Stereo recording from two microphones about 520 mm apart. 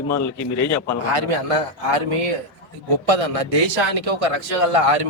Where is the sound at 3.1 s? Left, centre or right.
Right.